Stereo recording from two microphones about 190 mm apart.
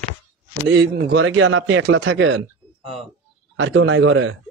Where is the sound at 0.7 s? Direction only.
65° right (ahead or behind).